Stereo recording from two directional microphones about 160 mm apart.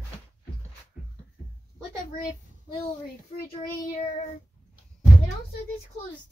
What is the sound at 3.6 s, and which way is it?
Child singing, 45° left (ahead or behind).